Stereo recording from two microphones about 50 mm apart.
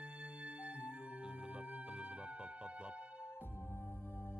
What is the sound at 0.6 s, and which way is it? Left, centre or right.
Music, left.